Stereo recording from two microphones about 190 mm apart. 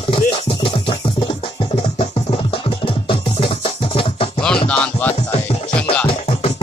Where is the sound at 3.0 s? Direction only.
30° left (ahead or behind).